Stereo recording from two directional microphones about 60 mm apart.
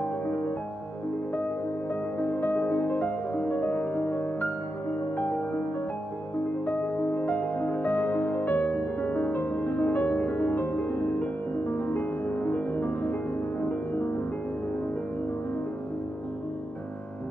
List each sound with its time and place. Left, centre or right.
2.1 s music: left
6.6 s music: left